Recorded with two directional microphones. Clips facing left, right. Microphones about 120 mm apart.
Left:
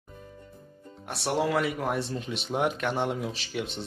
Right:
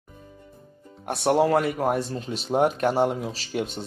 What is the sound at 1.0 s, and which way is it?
Speech, 55° right (ahead or behind).